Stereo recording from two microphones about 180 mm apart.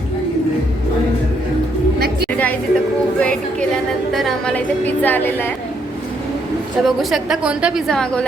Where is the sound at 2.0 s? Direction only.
60° right (ahead or behind).